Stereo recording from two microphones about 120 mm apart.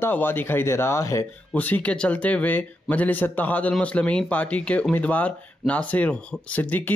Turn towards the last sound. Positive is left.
turn(degrees=15)  # may be behind; listen again after turning